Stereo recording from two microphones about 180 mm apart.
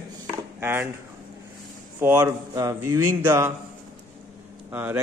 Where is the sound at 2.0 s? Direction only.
10° right (ahead or behind).